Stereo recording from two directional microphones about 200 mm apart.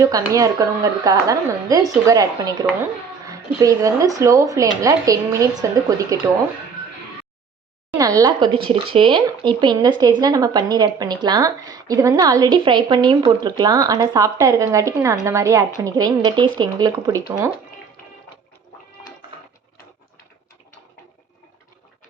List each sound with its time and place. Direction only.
0.3 s speech: 15° right (ahead or behind)
7.9 s speech: 15° right (ahead or behind)